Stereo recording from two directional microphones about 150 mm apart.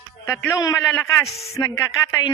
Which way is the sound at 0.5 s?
20° left (ahead or behind).